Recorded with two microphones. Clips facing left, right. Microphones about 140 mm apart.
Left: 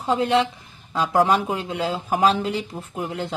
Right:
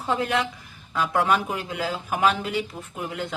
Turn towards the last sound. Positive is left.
turn(degrees=30)  # may be behind; listen again after turning